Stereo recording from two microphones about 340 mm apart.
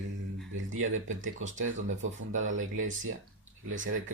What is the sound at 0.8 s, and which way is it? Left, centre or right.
Speech, right.